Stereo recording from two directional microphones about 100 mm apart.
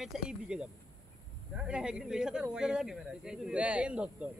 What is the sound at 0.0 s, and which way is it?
Speech, 5° right (ahead or behind).